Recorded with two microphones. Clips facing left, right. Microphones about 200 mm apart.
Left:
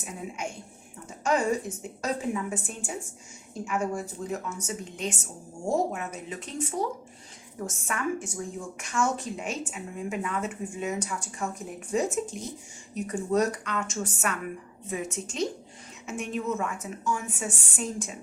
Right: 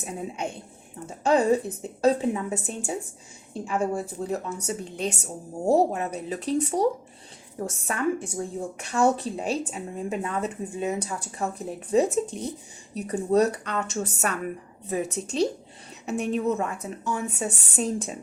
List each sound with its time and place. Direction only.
0.0 s a woman's voice: 35° right (ahead or behind)
7.9 s a woman's voice: 35° right (ahead or behind)